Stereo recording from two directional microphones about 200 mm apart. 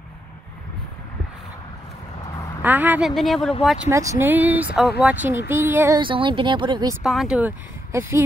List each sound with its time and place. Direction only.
2.6 s speech: 10° right (ahead or behind)
3.9 s speech: 15° right (ahead or behind)
5.9 s speech: 25° right (ahead or behind)
7.0 s speech: centre (ahead or behind)